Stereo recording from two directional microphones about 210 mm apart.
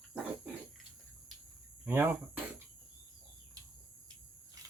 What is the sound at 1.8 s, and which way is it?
Speech, 10° right (ahead or behind).